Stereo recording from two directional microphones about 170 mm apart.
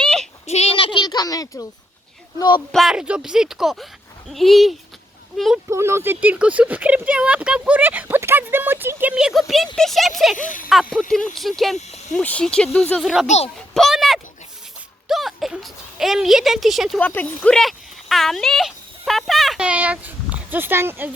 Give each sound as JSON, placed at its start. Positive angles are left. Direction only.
{"t": 0.0, "sound": "a sound", "side_deg": 5}
{"t": 0.4, "sound": "a sound", "side_deg": 40}
{"t": 2.7, "sound": "speech", "side_deg": -5}
{"t": 5.6, "sound": "speech", "side_deg": -15}
{"t": 10.3, "sound": "speech", "side_deg": 50}
{"t": 11.3, "sound": "speech", "side_deg": 0}
{"t": 13.2, "sound": "speech", "side_deg": 40}
{"t": 13.7, "sound": "speech", "side_deg": 0}
{"t": 17.0, "sound": "speech", "side_deg": 10}